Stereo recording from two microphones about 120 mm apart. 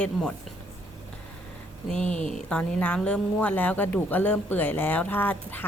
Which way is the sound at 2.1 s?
80° left.